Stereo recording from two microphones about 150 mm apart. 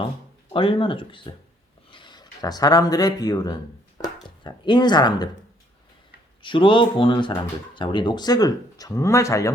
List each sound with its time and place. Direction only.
0.5 s speech: 35° left (ahead or behind)
6.4 s speech: 35° left (ahead or behind)